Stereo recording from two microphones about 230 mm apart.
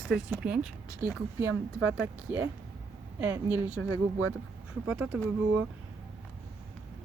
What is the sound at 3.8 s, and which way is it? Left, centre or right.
Speech, right.